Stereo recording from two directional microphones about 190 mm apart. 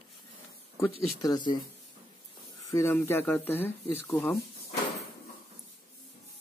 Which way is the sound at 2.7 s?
15° left (ahead or behind).